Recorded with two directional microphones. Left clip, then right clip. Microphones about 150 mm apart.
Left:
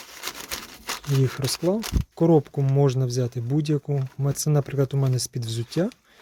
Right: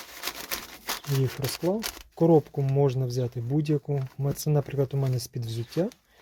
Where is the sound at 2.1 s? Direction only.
25° left (ahead or behind).